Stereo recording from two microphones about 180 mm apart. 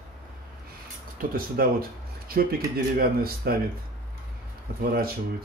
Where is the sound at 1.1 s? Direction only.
55° right (ahead or behind).